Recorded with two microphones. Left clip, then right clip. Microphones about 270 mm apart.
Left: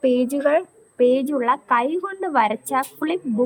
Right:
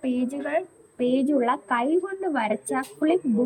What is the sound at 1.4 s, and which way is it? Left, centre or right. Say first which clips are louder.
A woman's voice: left 5 dB; centre.